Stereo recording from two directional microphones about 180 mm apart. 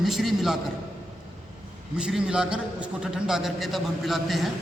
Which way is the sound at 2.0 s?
5° right (ahead or behind).